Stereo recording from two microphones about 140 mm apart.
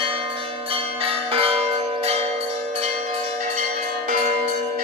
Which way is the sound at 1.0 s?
45° right (ahead or behind).